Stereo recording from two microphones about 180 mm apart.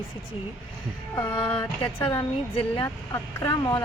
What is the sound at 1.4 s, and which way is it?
Speech, 25° left (ahead or behind).